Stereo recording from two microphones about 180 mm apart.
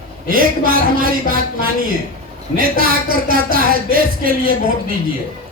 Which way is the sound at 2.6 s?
55° right (ahead or behind).